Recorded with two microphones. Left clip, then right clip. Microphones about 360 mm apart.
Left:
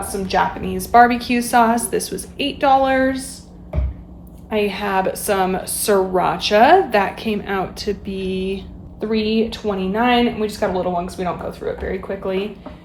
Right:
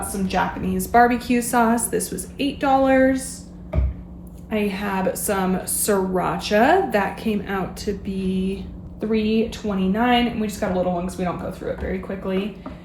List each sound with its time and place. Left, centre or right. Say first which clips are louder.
0.3 s a woman's voice: left 4 dB; left
4.4 s a woman's voice: left 5 dB; centre